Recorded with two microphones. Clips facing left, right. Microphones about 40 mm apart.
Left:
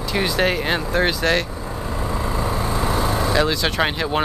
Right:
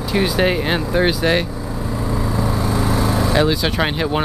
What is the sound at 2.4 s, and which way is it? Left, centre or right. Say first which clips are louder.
Vehicle: right 2 dB; left.